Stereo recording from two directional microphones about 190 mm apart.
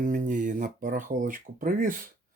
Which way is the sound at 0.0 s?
45° right (ahead or behind).